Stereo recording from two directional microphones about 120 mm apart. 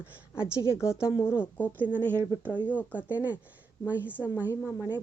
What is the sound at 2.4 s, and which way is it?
Speech, 15° left (ahead or behind).